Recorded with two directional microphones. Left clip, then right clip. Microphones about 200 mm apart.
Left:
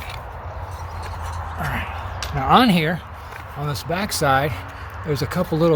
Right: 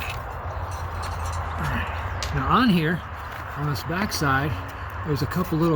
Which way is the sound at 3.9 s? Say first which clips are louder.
Left 5 dB; 45° left (ahead or behind).